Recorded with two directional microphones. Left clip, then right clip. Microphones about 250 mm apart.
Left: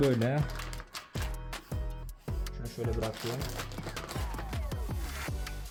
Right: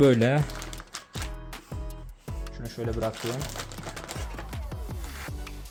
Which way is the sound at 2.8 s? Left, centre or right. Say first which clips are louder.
Right 3 dB; right.